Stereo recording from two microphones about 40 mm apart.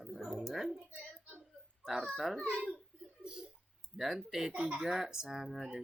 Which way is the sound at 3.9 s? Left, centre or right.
Centre.